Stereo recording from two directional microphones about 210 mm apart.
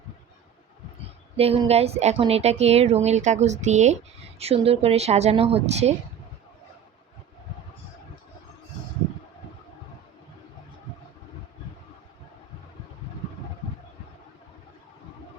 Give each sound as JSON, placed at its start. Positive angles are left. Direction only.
{"t": 1.4, "sound": "speech", "side_deg": -30}